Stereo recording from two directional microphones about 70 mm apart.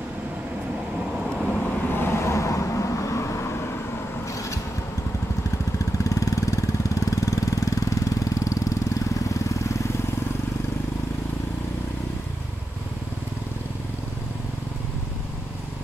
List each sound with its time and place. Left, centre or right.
0.9 s vehicle: centre
1.6 s vehicle: left
6.0 s vehicle: left